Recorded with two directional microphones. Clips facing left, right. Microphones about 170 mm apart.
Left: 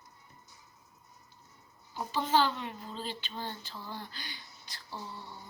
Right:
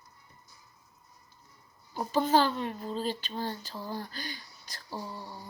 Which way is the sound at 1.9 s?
40° right (ahead or behind).